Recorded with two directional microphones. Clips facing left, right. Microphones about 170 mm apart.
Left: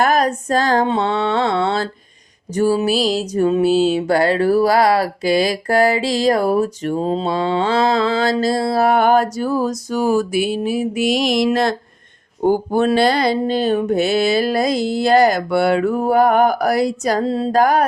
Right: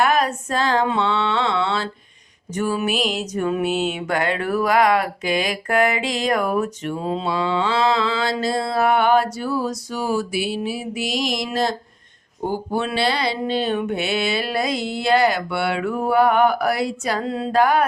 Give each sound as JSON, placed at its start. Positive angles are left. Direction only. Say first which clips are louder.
{"t": 0.0, "sound": "female singing", "louder": "left 3 dB", "side_deg": 40}
{"t": 0.9, "sound": "mantra", "louder": "left 3 dB", "side_deg": 40}
{"t": 2.5, "sound": "music", "louder": "left 6 dB", "side_deg": 35}
{"t": 12.5, "sound": "music", "louder": "left 8 dB", "side_deg": 45}